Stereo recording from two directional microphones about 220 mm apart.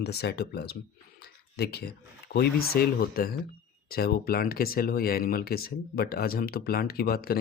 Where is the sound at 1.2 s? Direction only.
45° left (ahead or behind).